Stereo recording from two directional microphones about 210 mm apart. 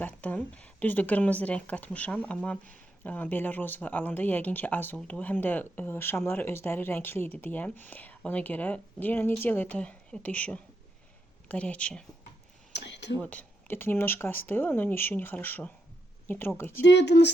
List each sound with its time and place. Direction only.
0.0 s speech: 5° left (ahead or behind)
12.7 s a sound: 55° left (ahead or behind)
13.1 s speech: 5° left (ahead or behind)
16.8 s speech: 55° left (ahead or behind)